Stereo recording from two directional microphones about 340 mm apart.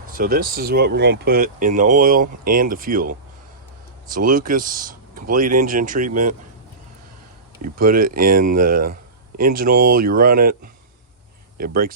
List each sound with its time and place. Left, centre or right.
0.1 s speech: right
7.6 s speech: right